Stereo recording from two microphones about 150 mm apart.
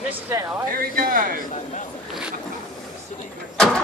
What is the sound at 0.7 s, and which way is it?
Speech, 70° right (ahead or behind).